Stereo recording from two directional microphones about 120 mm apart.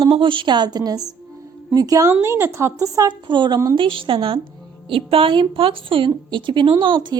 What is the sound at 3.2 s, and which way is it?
A woman's voice, 40° right (ahead or behind).